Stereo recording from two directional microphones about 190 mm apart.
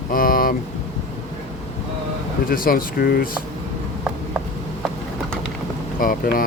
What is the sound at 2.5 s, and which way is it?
Speech, 50° left (ahead or behind).